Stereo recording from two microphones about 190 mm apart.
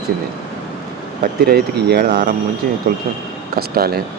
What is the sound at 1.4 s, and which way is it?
Speech, 60° right (ahead or behind).